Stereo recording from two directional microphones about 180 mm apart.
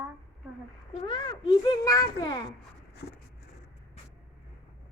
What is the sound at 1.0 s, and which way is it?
A child's voice, 25° left (ahead or behind).